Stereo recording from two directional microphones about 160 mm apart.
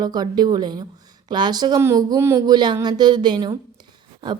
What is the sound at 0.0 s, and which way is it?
Speech, 25° right (ahead or behind).